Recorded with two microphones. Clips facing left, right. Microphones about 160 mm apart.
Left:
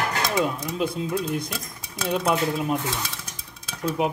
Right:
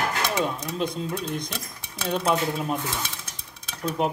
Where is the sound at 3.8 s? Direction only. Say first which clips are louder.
Left 1 dB; 5° left (ahead or behind).